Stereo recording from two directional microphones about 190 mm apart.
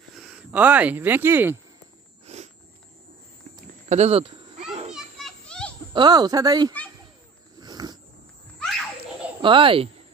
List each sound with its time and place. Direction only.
0.1 s speech: 5° right (ahead or behind)
2.2 s a sound: 35° right (ahead or behind)
3.9 s children playing: 35° right (ahead or behind)
4.9 s children playing: centre (ahead or behind)
5.9 s speech: 20° right (ahead or behind)
7.6 s a sound: 20° right (ahead or behind)
9.4 s speech: 25° right (ahead or behind)